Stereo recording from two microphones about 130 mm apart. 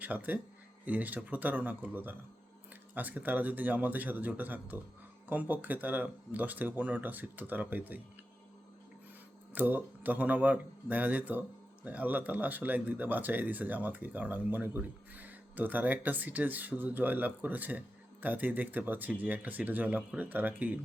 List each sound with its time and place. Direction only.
0.0 s speech: 15° right (ahead or behind)
9.6 s speech: 15° right (ahead or behind)